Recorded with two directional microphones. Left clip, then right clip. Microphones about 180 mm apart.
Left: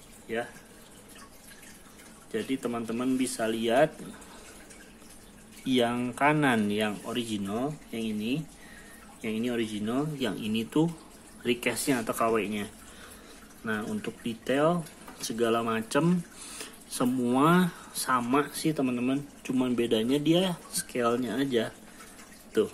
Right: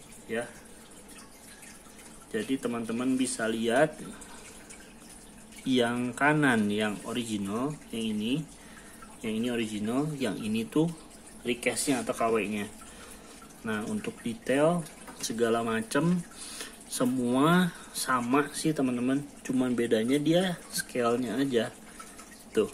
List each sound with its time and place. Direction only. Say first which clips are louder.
0.3 s speech: left 1 dB; centre (ahead or behind)
2.3 s speech: even; 5° left (ahead or behind)
5.7 s speech: left 1 dB; 5° left (ahead or behind)
11.4 s speech: left 1 dB; 30° left (ahead or behind); by 12.6 s 10° left (ahead or behind)
13.7 s speech: left 1 dB; 5° left (ahead or behind)